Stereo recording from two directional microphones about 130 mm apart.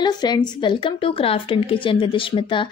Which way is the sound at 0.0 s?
35° left (ahead or behind).